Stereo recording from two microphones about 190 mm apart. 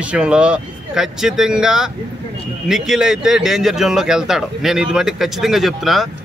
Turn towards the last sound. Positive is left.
turn(degrees=0)  # may be behind; listen again after turning